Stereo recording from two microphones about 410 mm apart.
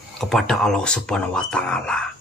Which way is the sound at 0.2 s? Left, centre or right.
Centre.